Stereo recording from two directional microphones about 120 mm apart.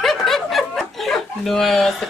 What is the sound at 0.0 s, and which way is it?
Speech, centre (ahead or behind).